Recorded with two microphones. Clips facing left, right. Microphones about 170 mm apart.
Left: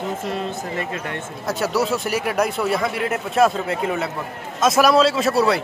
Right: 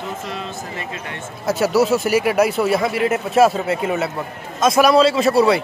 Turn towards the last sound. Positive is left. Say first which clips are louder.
# right 3 dB
turn(degrees=0)  # may be behind; listen again after turning